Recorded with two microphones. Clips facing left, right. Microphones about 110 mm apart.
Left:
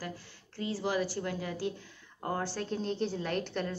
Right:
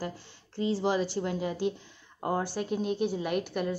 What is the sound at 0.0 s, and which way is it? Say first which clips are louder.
Speech: right 4 dB; 25° right (ahead or behind).